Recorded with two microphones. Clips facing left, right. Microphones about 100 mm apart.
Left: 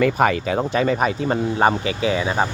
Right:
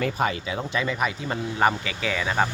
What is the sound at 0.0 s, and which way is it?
Speech, 65° left (ahead or behind).